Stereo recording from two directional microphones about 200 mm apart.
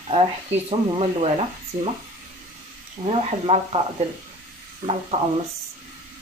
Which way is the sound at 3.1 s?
30° right (ahead or behind).